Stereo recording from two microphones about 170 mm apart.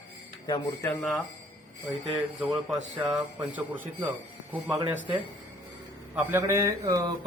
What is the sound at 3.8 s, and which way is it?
Mantra, 10° right (ahead or behind).